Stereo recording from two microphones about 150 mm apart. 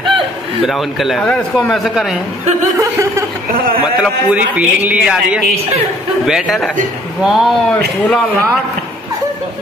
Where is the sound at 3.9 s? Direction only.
5° right (ahead or behind).